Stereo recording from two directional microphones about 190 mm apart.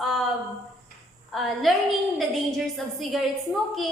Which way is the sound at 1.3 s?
Centre (ahead or behind).